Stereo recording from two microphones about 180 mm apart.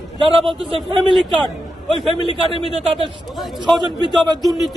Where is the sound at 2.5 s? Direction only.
30° right (ahead or behind).